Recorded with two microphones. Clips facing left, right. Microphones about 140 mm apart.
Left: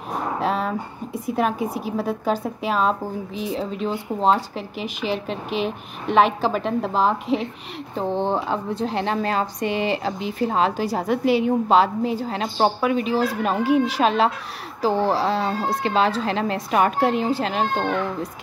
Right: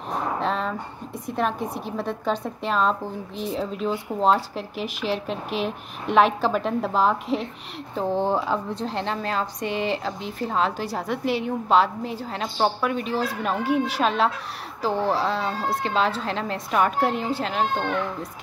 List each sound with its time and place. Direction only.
0.4 s a woman's voice: 5° left (ahead or behind)
15.0 s speech: 30° left (ahead or behind)
15.2 s a woman's voice: centre (ahead or behind)